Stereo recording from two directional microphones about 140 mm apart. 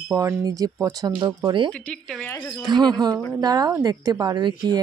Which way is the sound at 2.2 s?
15° left (ahead or behind).